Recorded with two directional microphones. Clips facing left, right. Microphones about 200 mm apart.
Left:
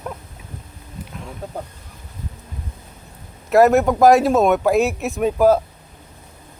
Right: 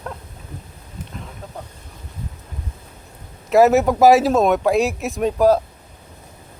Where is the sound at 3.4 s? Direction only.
Centre (ahead or behind).